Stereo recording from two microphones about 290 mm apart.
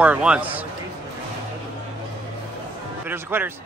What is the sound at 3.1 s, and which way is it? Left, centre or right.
Speech, centre.